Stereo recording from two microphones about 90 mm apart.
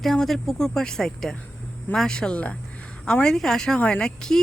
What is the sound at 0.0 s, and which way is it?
Speech, 5° left (ahead or behind).